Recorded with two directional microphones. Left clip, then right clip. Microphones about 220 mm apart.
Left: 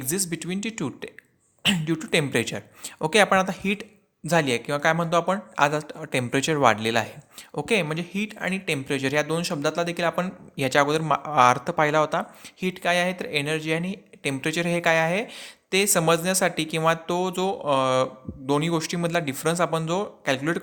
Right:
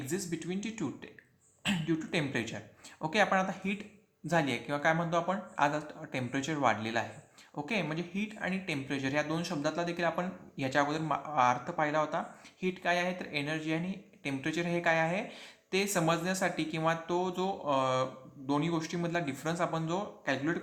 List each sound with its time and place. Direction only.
0.0 s speech: 45° left (ahead or behind)